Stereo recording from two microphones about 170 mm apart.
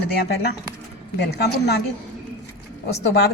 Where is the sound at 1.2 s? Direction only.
75° left (ahead or behind).